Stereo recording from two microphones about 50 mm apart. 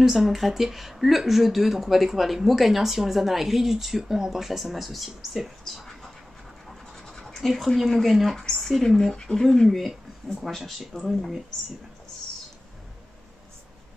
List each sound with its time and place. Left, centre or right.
0.0 s speech: centre
7.0 s speech: centre